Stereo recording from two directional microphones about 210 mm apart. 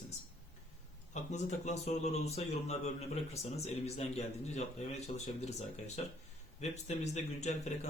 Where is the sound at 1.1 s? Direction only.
35° left (ahead or behind).